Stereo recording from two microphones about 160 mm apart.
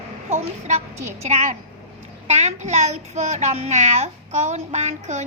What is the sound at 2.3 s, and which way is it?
A child's voice, 45° right (ahead or behind).